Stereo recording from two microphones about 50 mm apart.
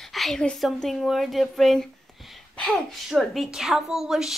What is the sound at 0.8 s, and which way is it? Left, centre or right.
Speech, centre.